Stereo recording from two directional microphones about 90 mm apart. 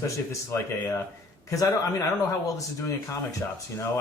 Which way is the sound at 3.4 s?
25° left (ahead or behind).